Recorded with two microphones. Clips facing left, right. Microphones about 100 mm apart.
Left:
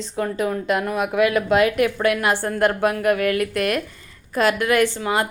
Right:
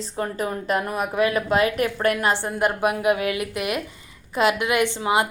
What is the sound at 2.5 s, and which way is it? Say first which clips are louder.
A woman's voice: left 3 dB; 10° right (ahead or behind).